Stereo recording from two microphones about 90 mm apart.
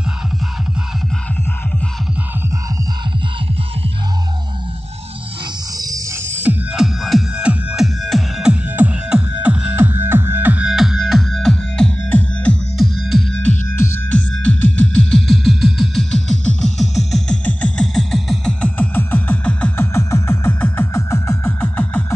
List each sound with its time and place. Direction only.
5.8 s music: 40° right (ahead or behind)
6.2 s music: 25° right (ahead or behind)
6.7 s music: centre (ahead or behind)
8.6 s music: 15° right (ahead or behind)
10.7 s music: 5° right (ahead or behind)
14.3 s music: 15° left (ahead or behind)
17.5 s a sound: 15° left (ahead or behind)
17.9 s music: 5° left (ahead or behind)
19.8 s music: 30° left (ahead or behind)